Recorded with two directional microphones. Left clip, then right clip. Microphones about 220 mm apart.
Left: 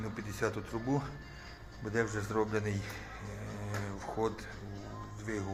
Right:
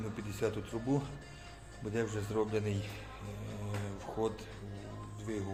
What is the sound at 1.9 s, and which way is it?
Speech, 5° right (ahead or behind).